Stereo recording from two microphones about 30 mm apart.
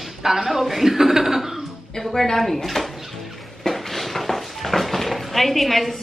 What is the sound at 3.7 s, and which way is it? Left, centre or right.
Dishes, centre.